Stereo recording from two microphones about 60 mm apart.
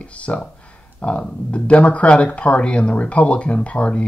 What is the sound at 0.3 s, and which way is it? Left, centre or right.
Speech, left.